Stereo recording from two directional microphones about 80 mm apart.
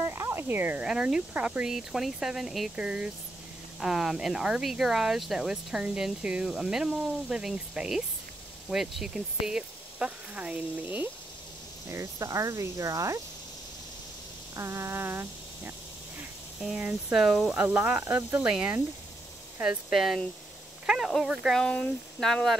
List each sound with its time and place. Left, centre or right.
0.0 s a sound: right
0.8 s speech: centre
8.6 s speech: centre
11.9 s speech: right
14.5 s speech: right
16.6 s speech: centre
17.6 s speech: centre
18.4 s speech: centre
21.5 s speech: centre